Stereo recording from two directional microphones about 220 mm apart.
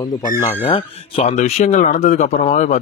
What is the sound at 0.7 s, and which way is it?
Speech, 25° left (ahead or behind).